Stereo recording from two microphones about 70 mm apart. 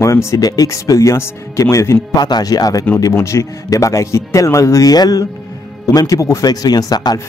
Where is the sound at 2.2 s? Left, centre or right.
Left.